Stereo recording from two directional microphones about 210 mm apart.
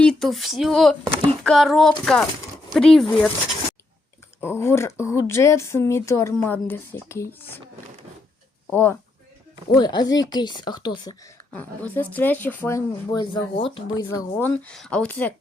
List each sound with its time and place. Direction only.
0.0 s speech: 5° left (ahead or behind)
4.4 s speech: 10° left (ahead or behind)
8.7 s speech: 10° left (ahead or behind)
9.7 s speech: 20° left (ahead or behind)
11.5 s speech: 10° left (ahead or behind)
14.3 s speech: 10° left (ahead or behind)